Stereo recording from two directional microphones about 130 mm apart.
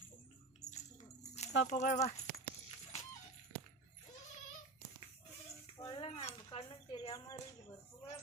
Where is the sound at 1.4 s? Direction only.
60° left (ahead or behind).